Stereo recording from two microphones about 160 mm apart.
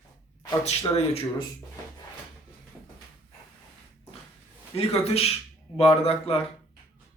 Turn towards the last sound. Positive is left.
turn(degrees=40)  # may be behind; listen again after turning